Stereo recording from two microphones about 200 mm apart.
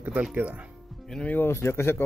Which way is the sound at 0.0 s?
5° right (ahead or behind).